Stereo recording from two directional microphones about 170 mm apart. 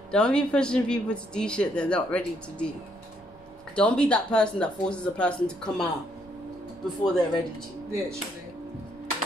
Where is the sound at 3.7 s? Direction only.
5° left (ahead or behind).